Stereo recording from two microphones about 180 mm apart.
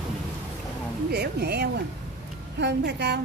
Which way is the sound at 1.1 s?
60° right (ahead or behind).